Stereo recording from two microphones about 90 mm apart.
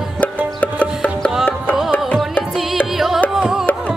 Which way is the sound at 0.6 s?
15° left (ahead or behind).